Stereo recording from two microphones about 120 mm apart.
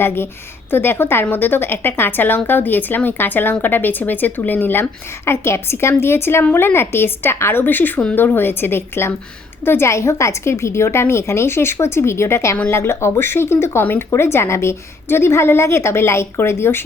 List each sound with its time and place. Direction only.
0.0 s a woman's voice: 20° left (ahead or behind)